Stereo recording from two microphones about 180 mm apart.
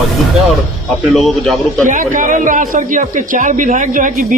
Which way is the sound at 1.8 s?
45° right (ahead or behind).